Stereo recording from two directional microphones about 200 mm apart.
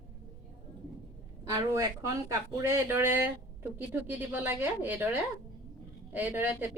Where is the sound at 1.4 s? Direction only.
15° right (ahead or behind).